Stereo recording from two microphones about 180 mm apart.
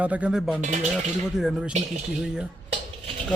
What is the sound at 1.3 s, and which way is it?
Speech, 5° right (ahead or behind).